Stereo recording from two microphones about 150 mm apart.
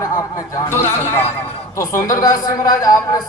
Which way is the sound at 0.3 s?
25° left (ahead or behind).